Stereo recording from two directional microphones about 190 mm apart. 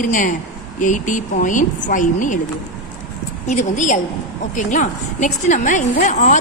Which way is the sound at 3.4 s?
40° left (ahead or behind).